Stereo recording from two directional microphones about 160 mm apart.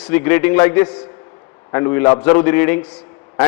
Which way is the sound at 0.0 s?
15° left (ahead or behind).